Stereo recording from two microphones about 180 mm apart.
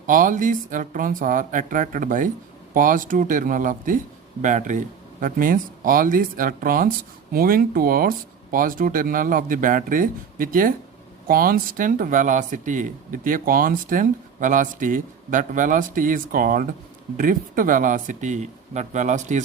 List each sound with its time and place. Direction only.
0.1 s speech: 45° right (ahead or behind)